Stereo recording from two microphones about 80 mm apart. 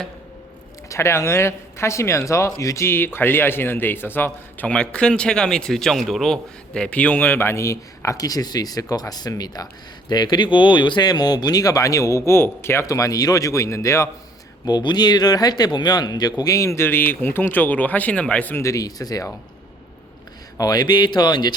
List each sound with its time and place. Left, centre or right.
0.9 s speech: left
12.8 s speech: left
14.6 s speech: left
16.4 s speech: left
18.6 s speech: left
20.6 s speech: left